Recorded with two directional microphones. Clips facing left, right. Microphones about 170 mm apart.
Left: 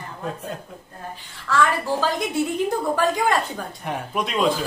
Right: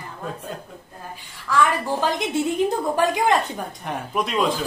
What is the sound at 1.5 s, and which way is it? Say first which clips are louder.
Speech: even; 20° right (ahead or behind).